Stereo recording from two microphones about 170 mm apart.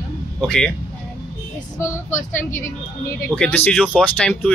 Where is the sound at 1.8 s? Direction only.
15° left (ahead or behind).